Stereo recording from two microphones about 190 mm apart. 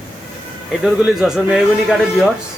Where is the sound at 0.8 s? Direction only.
5° right (ahead or behind).